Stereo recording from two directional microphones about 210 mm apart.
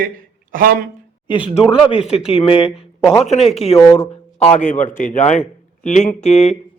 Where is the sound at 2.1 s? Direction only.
30° left (ahead or behind).